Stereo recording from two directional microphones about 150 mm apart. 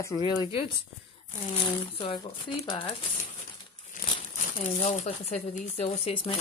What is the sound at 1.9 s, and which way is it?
Speech, 35° left (ahead or behind).